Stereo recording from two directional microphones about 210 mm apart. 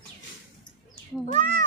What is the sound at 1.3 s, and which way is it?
Speech, 35° right (ahead or behind).